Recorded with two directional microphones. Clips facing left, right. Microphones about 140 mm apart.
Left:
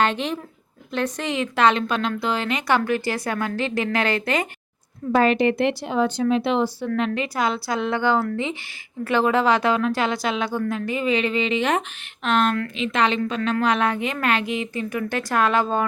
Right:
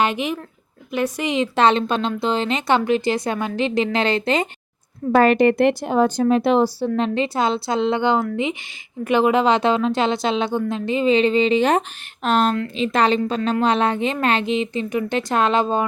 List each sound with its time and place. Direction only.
0.0 s speech: 10° right (ahead or behind)
1.5 s a woman's voice: 30° right (ahead or behind)
5.1 s a woman's voice: 50° right (ahead or behind); by 15.8 s 20° right (ahead or behind)